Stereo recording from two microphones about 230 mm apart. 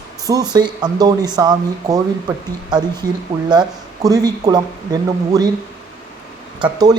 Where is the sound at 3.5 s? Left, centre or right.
Centre.